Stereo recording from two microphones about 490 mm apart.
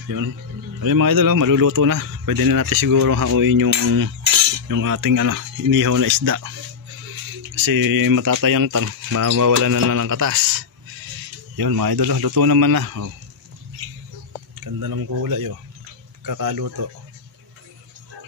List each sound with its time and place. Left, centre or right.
0.7 s speech: right
7.5 s speech: right
14.6 s speech: right